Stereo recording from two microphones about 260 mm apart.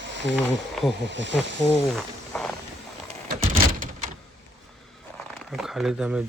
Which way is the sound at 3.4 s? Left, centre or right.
Right.